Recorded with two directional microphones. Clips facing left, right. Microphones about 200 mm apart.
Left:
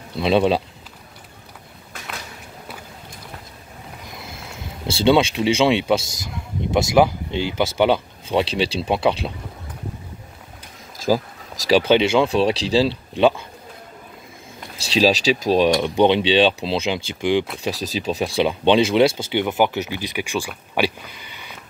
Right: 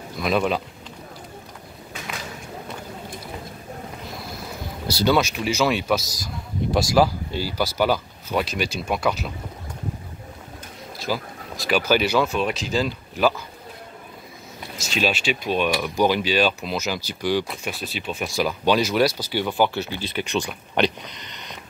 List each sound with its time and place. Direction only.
0.2 s a man's voice: 30° left (ahead or behind)
4.8 s a man's voice: 25° left (ahead or behind)
11.1 s speech: 40° left (ahead or behind)
11.7 s a man's voice: 25° left (ahead or behind)
14.9 s a man's voice: 35° left (ahead or behind)
17.6 s a man's voice: 40° left (ahead or behind); by 21.5 s 5° left (ahead or behind)